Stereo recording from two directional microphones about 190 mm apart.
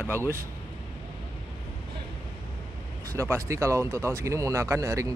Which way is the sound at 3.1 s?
15° right (ahead or behind).